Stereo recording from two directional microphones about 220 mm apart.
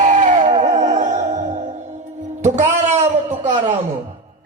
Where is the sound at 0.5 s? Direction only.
30° right (ahead or behind).